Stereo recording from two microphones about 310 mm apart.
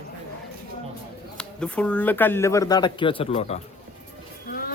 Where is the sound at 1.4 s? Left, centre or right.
Centre.